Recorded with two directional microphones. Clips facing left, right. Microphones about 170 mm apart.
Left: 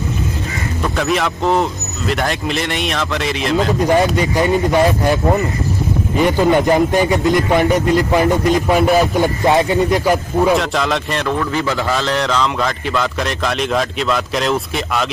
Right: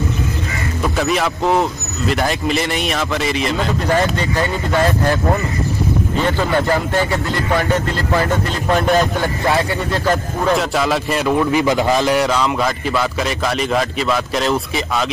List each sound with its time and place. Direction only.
0.9 s a man's voice: centre (ahead or behind)
3.8 s a man's voice: 15° left (ahead or behind)
10.6 s a man's voice: 5° right (ahead or behind)
11.3 s a man's voice: 15° right (ahead or behind)